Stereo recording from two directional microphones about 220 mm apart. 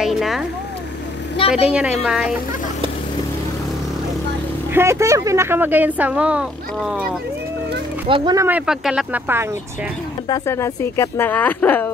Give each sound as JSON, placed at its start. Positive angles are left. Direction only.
{"t": 0.0, "sound": "a sound", "side_deg": 0}
{"t": 1.7, "sound": "a woman's voice", "side_deg": -5}
{"t": 4.7, "sound": "speech", "side_deg": -10}
{"t": 8.1, "sound": "speech", "side_deg": -20}
{"t": 8.5, "sound": "speech", "side_deg": -5}
{"t": 10.2, "sound": "speech", "side_deg": 15}